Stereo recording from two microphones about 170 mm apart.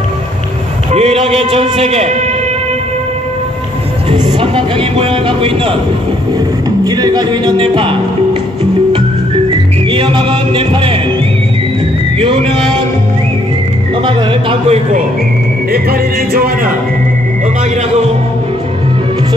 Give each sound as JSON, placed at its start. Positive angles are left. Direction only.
{"t": 0.9, "sound": "speech", "side_deg": -35}
{"t": 4.1, "sound": "speech", "side_deg": -30}
{"t": 6.8, "sound": "music", "side_deg": -25}
{"t": 9.5, "sound": "music", "side_deg": -30}
{"t": 12.2, "sound": "music", "side_deg": -30}
{"t": 14.0, "sound": "speech", "side_deg": -30}
{"t": 15.7, "sound": "music", "side_deg": -60}